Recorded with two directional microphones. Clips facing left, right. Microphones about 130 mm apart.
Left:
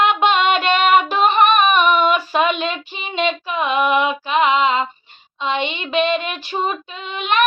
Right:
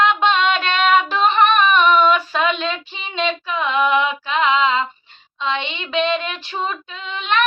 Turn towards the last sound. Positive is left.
turn(degrees=10)  # may be behind; listen again after turning